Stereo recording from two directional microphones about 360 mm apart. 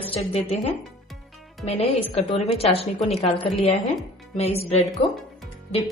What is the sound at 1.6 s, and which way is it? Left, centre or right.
A woman's voice, centre.